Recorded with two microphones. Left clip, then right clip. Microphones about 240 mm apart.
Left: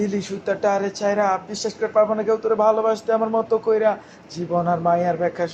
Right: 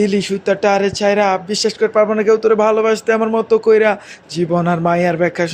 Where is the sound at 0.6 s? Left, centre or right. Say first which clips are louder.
Right 5 dB; right.